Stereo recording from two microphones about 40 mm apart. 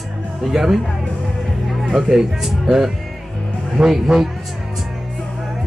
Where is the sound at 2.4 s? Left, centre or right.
Centre.